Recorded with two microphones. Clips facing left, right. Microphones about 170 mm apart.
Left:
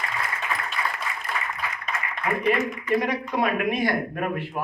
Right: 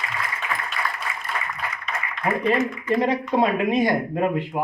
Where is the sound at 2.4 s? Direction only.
25° right (ahead or behind).